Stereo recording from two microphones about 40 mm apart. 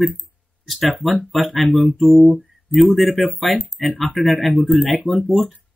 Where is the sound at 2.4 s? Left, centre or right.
Centre.